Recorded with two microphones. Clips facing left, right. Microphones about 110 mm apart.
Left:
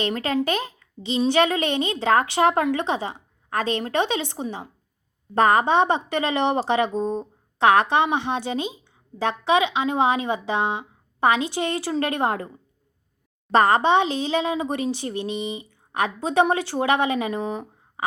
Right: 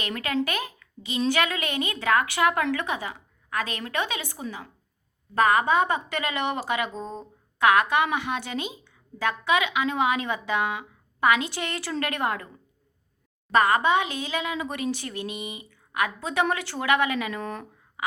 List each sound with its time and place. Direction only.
0.0 s speech: 30° left (ahead or behind)
7.6 s speech: 30° left (ahead or behind)
13.5 s speech: 30° left (ahead or behind)
17.4 s speech: 10° left (ahead or behind)